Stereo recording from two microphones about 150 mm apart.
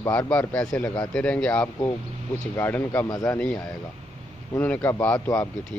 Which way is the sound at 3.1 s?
25° left (ahead or behind).